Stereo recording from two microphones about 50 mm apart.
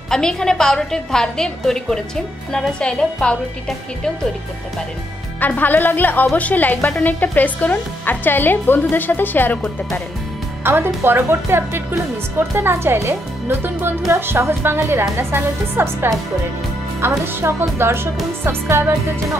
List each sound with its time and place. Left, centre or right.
0.1 s a woman's voice: centre
5.6 s speech: left
10.6 s speech: right
13.7 s speech: right